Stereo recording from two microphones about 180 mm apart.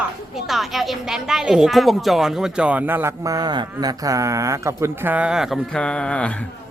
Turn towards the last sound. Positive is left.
turn(degrees=5)  # may be behind; listen again after turning